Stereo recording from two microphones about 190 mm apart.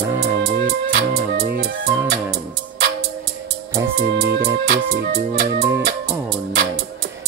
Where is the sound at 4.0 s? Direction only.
55° right (ahead or behind).